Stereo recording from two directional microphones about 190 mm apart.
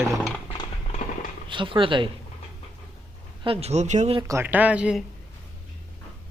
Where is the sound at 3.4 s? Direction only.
30° right (ahead or behind).